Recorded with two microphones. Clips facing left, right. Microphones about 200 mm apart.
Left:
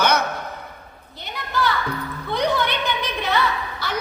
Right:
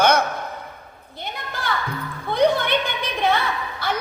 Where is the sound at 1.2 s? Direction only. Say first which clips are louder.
Left 6 dB; 55° right (ahead or behind).